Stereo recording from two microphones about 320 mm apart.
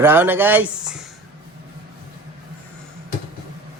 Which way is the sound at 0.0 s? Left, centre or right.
Centre.